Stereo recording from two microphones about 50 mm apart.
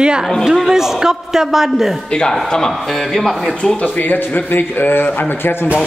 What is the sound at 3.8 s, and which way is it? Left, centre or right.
A man's voice, left.